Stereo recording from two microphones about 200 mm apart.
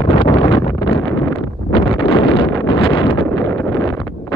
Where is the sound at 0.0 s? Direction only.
25° left (ahead or behind).